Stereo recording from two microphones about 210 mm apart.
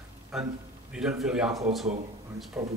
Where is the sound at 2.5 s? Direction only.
15° right (ahead or behind).